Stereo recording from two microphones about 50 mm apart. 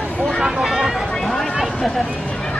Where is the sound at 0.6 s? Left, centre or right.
Centre.